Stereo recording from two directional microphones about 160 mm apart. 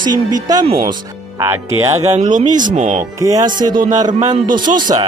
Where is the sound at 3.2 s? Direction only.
20° right (ahead or behind).